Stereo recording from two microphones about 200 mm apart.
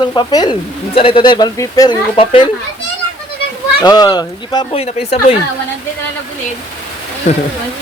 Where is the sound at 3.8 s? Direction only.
20° left (ahead or behind).